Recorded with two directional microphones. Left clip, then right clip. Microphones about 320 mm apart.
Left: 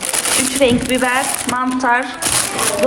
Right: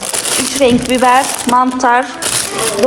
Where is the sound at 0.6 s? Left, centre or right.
Centre.